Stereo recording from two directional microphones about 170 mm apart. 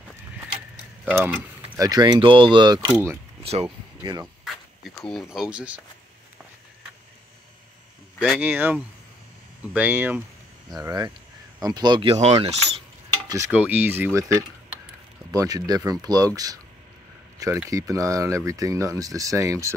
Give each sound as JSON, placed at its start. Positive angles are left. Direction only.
{"t": 1.0, "sound": "speech", "side_deg": -10}
{"t": 1.9, "sound": "speech", "side_deg": -25}
{"t": 2.8, "sound": "speech", "side_deg": -15}
{"t": 4.8, "sound": "speech", "side_deg": 0}
{"t": 8.2, "sound": "speech", "side_deg": -10}
{"t": 10.7, "sound": "speech", "side_deg": -20}
{"t": 13.3, "sound": "speech", "side_deg": -15}
{"t": 17.6, "sound": "speech", "side_deg": -20}